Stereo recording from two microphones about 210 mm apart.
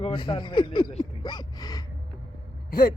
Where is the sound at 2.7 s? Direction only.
45° left (ahead or behind).